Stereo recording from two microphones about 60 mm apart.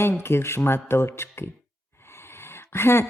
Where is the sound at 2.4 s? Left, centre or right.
Left.